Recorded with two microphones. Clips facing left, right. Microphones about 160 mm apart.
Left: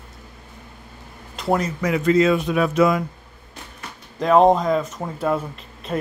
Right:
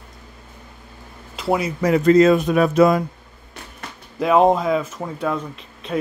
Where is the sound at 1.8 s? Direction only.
40° right (ahead or behind).